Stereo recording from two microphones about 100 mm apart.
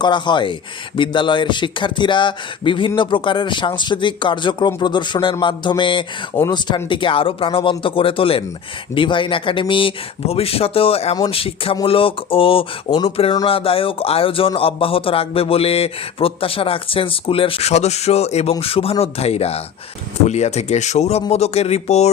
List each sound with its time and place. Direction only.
0.0 s a man's voice: 50° left (ahead or behind); by 18.5 s 90° left
18.6 s speech: 75° left (ahead or behind); by 22.1 s 90° left